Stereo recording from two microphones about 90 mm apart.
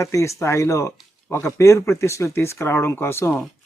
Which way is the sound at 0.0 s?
35° left (ahead or behind).